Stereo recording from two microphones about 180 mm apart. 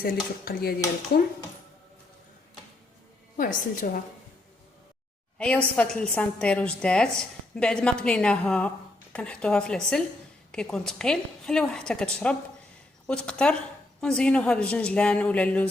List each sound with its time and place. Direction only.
0.0 s dishes: 55° left (ahead or behind)
3.3 s a woman's voice: 50° left (ahead or behind)
5.7 s a woman's voice: 5° left (ahead or behind)